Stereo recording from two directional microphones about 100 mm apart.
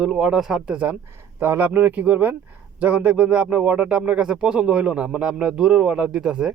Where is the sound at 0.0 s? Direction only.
5° right (ahead or behind).